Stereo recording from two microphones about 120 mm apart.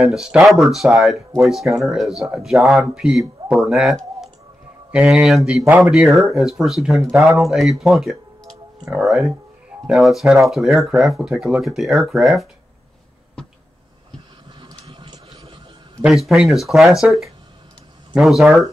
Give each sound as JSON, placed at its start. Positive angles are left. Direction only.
{"t": 0.0, "sound": "speech", "side_deg": -5}
{"t": 7.8, "sound": "a sound", "side_deg": 0}
{"t": 9.0, "sound": "speech", "side_deg": 0}
{"t": 14.6, "sound": "train", "side_deg": -45}
{"t": 16.0, "sound": "speech", "side_deg": 0}